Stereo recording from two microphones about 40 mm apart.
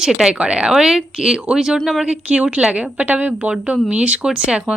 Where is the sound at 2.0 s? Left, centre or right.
Right.